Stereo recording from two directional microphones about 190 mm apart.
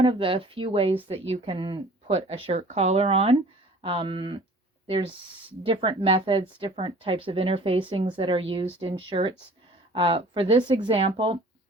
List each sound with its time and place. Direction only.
0.0 s a woman's voice: 30° right (ahead or behind)